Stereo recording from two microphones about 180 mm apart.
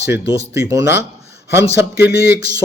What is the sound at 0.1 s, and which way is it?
Speech, 15° right (ahead or behind).